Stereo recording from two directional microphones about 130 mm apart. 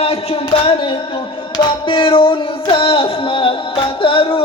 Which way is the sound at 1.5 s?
40° left (ahead or behind).